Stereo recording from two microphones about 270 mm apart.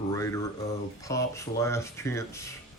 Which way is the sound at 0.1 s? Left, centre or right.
Centre.